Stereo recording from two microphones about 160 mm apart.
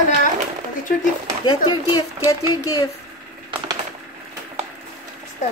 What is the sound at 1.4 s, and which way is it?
Speech, 25° left (ahead or behind).